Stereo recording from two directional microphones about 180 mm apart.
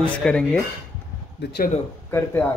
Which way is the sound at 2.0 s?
15° left (ahead or behind).